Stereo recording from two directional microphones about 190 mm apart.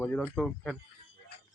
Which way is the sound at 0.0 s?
10° left (ahead or behind).